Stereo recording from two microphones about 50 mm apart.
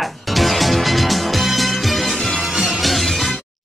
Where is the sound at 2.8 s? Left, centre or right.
Centre.